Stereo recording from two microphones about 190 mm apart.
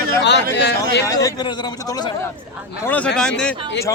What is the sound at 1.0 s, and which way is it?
A man's voice, 20° left (ahead or behind).